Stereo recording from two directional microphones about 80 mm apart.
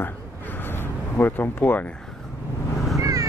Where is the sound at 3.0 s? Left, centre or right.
Right.